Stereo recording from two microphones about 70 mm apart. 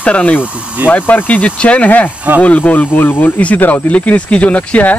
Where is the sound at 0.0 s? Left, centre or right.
Left.